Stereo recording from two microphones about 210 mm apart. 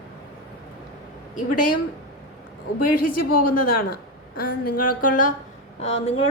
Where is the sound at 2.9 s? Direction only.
45° left (ahead or behind).